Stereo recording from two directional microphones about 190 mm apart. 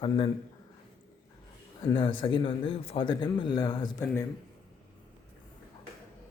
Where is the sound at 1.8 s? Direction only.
25° left (ahead or behind).